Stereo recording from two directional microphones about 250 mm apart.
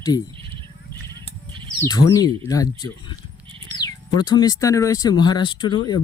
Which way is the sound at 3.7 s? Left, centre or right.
Centre.